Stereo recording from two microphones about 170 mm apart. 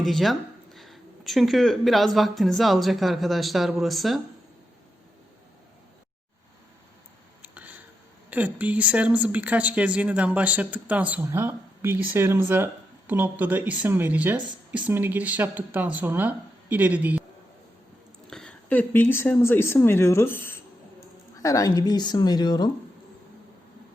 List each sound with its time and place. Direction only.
0.0 s speech: centre (ahead or behind)
7.4 s a sound: 10° right (ahead or behind)
8.3 s speech: 10° right (ahead or behind)
18.3 s speech: 5° left (ahead or behind); by 22.7 s 25° left (ahead or behind)